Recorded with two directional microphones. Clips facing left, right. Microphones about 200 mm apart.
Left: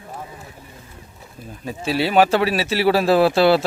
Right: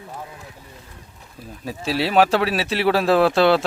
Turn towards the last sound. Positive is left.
turn(degrees=5)  # may be behind; listen again after turning